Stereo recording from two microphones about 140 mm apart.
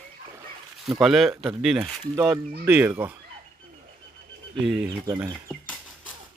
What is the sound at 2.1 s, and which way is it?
Speech, 20° right (ahead or behind).